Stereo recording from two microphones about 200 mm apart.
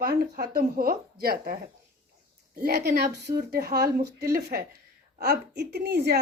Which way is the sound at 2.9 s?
55° right (ahead or behind).